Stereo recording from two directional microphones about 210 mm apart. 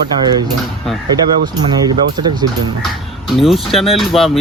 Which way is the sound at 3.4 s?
Centre (ahead or behind).